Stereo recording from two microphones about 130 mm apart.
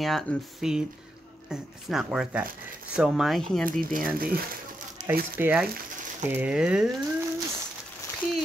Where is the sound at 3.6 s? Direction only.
90° right.